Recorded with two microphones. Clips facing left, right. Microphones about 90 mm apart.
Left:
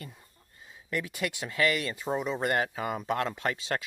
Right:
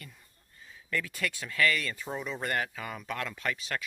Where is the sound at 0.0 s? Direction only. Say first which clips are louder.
Left 5 dB; 25° left (ahead or behind).